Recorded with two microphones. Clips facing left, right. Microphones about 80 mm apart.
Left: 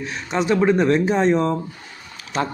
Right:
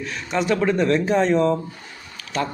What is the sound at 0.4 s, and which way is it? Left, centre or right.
A man's voice, centre.